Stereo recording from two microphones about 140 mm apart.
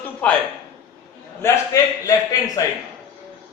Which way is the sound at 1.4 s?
20° left (ahead or behind).